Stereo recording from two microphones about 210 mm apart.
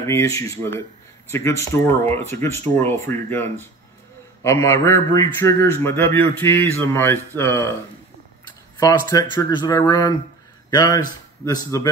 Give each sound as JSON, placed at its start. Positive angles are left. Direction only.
{"t": 0.0, "sound": "a man's voice", "side_deg": 15}
{"t": 8.7, "sound": "speech", "side_deg": 15}